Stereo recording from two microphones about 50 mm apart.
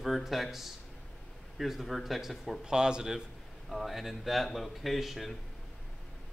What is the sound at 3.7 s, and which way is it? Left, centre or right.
Speech, centre.